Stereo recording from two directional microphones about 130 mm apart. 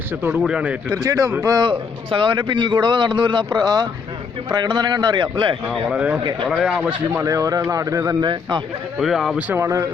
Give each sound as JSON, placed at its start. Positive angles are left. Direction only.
{"t": 0.1, "sound": "speech", "side_deg": -15}
{"t": 0.9, "sound": "speech", "side_deg": -30}
{"t": 2.0, "sound": "speech", "side_deg": -40}
{"t": 5.6, "sound": "speech", "side_deg": 0}
{"t": 7.1, "sound": "speech", "side_deg": -20}
{"t": 8.3, "sound": "speech", "side_deg": -35}
{"t": 9.0, "sound": "speech", "side_deg": 0}
{"t": 9.5, "sound": "speech", "side_deg": -20}